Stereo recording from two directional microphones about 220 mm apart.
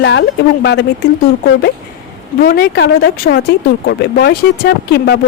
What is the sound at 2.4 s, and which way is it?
Speech, 45° left (ahead or behind).